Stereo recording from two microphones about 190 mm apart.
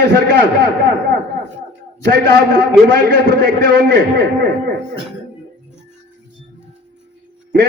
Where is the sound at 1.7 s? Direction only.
55° right (ahead or behind).